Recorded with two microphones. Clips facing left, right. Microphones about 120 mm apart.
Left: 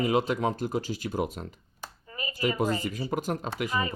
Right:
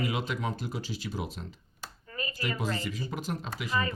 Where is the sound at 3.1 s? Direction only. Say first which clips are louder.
Left 5 dB; 50° left (ahead or behind).